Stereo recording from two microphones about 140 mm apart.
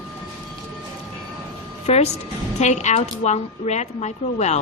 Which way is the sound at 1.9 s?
50° left (ahead or behind).